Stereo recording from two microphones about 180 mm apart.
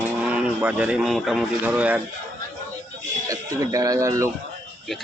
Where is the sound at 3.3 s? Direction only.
20° right (ahead or behind).